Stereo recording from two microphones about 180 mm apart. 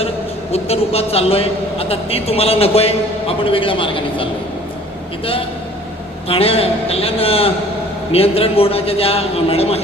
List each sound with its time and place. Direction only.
0.5 s a man's voice: 35° left (ahead or behind)
6.2 s a man's voice: 30° left (ahead or behind)